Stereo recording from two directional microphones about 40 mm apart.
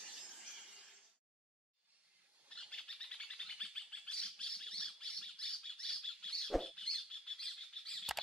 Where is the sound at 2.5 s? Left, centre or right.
Left.